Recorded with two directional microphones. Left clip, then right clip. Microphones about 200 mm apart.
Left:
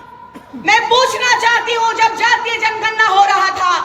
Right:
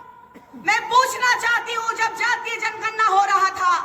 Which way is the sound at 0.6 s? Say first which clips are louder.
Left 6 dB; 50° right (ahead or behind).